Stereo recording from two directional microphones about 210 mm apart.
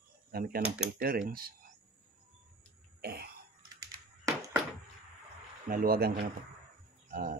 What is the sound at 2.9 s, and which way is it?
Throat clearing, 45° right (ahead or behind).